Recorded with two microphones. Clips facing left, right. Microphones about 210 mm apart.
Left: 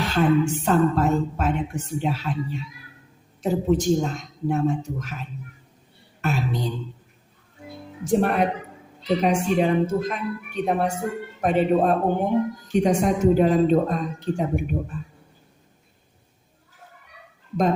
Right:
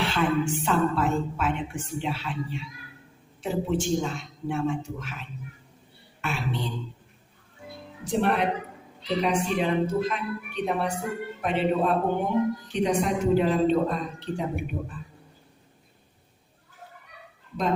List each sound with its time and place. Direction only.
0.0 s a sound: 40° left (ahead or behind)
0.5 s a woman's voice: 40° left (ahead or behind)
8.0 s speech: 45° left (ahead or behind)